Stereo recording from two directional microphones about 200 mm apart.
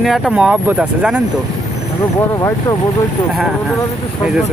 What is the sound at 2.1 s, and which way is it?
Speech, 15° left (ahead or behind).